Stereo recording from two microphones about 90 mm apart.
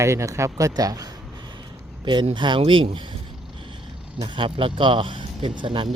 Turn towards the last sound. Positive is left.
turn(degrees=-65)  # may be behind; listen again after turning